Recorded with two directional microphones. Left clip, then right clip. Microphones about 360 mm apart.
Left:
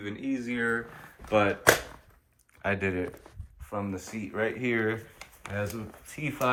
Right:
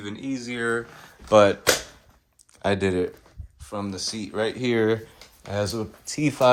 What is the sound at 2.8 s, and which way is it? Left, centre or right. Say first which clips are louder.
Speech: right 7 dB; centre.